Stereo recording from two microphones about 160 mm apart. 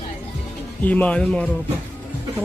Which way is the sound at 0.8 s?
10° left (ahead or behind).